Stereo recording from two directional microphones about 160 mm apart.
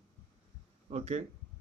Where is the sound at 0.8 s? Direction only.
45° right (ahead or behind).